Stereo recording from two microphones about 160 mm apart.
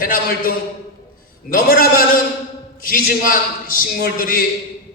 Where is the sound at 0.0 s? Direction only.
65° left (ahead or behind).